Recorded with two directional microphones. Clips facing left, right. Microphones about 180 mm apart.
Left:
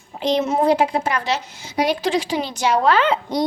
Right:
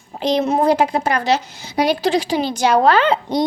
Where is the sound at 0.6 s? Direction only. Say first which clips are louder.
Right 2 dB; 40° right (ahead or behind).